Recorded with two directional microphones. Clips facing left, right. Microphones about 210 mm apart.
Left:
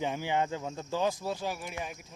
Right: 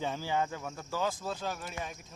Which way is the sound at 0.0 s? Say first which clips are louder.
Left 2 dB; 15° left (ahead or behind).